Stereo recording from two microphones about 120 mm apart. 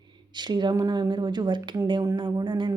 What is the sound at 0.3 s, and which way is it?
A woman's voice, 35° right (ahead or behind).